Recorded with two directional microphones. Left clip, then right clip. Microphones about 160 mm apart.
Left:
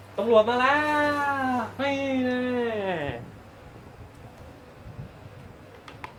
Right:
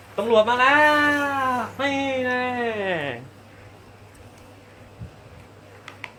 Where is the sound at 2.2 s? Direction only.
45° right (ahead or behind).